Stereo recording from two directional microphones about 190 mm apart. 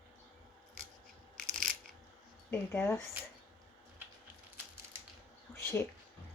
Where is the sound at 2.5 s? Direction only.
10° left (ahead or behind).